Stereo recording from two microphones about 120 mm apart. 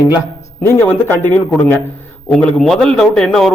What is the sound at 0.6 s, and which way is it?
A man's voice, 20° left (ahead or behind).